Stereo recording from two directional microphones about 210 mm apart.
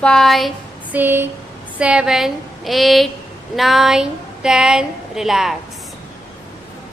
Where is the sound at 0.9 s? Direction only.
10° right (ahead or behind).